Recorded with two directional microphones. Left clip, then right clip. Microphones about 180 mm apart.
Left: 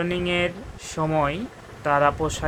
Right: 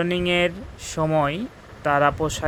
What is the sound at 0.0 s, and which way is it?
Speech, 40° right (ahead or behind).